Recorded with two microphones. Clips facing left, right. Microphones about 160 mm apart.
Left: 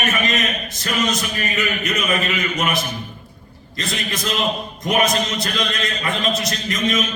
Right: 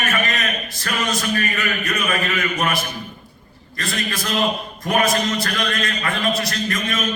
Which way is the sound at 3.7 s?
20° left (ahead or behind).